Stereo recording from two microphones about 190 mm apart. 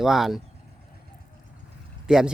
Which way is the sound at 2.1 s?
5° right (ahead or behind).